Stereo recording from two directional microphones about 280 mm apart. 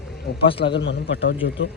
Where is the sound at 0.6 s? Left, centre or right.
Left.